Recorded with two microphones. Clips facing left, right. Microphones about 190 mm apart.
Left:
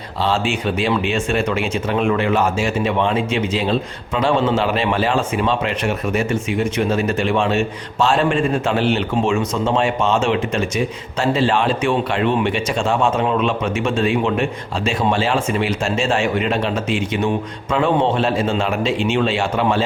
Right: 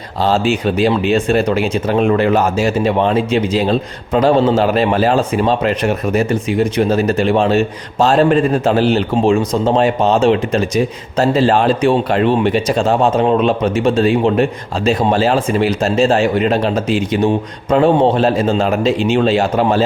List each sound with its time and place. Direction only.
0.2 s speech: 40° right (ahead or behind)